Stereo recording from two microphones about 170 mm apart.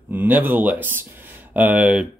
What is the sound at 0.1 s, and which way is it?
Speech, 10° right (ahead or behind).